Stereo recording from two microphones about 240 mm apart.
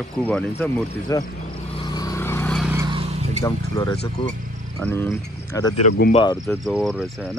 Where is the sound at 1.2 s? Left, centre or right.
Left; by 2.7 s centre.